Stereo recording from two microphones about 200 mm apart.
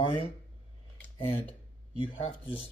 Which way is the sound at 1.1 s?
25° left (ahead or behind).